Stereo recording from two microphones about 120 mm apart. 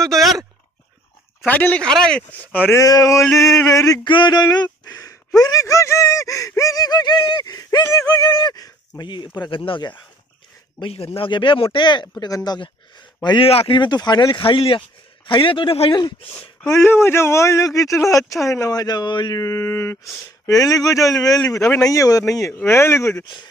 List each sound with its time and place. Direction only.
0.0 s a sound: centre (ahead or behind)
1.4 s speech: 15° left (ahead or behind)
2.8 s speech: 30° left (ahead or behind)
4.0 s speech: 40° left (ahead or behind)
10.8 s speech: 55° left (ahead or behind)
13.5 s speech: 50° left (ahead or behind)
14.4 s speech: 50° left (ahead or behind)
16.7 s speech: 20° left (ahead or behind)
23.2 s speech: 40° left (ahead or behind)